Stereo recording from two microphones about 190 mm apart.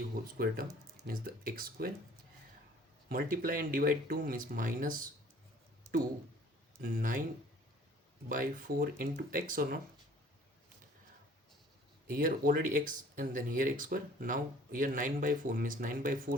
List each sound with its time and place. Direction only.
0.3 s speech: 50° right (ahead or behind)
3.1 s speech: 50° right (ahead or behind)
6.8 s speech: 50° right (ahead or behind)
8.3 s speech: 45° right (ahead or behind)
12.0 s speech: 45° right (ahead or behind)